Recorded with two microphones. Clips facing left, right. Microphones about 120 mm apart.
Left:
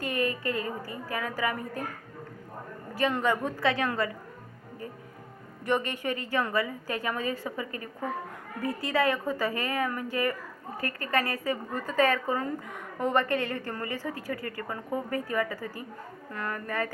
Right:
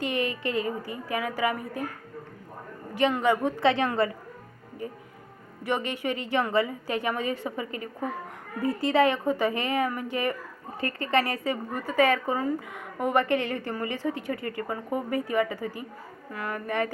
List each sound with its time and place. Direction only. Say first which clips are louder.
0.0 s a woman's voice: right 1 dB; 20° right (ahead or behind)
3.1 s a woman's voice: right 2 dB; 15° right (ahead or behind)
5.6 s a woman's voice: even; 15° right (ahead or behind)